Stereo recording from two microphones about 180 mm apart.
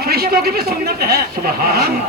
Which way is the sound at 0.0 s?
60° right (ahead or behind).